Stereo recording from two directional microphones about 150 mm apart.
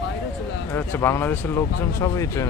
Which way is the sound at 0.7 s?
15° left (ahead or behind).